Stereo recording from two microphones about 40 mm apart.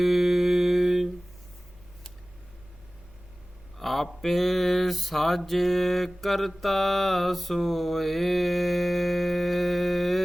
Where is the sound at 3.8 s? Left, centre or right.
Centre.